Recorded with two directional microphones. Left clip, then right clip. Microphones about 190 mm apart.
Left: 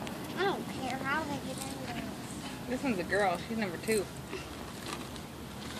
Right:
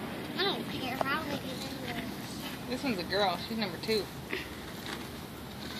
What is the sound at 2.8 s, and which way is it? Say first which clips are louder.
Speech: even; 30° left (ahead or behind).